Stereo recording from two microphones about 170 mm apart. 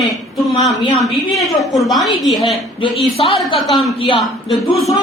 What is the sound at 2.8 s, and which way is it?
Speech, 30° left (ahead or behind).